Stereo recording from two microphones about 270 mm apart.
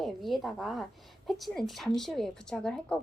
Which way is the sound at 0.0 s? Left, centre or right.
Centre.